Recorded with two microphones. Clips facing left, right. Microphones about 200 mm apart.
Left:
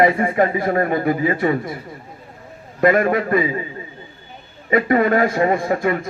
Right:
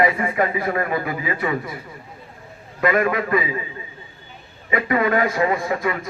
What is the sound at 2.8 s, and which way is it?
Speech, 40° left (ahead or behind).